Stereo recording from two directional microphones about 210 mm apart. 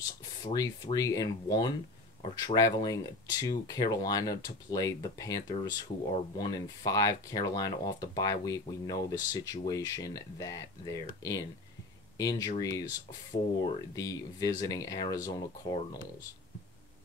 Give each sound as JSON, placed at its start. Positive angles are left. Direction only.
{"t": 0.2, "sound": "a sound", "side_deg": 20}
{"t": 0.9, "sound": "speech", "side_deg": 15}
{"t": 13.9, "sound": "speech", "side_deg": 15}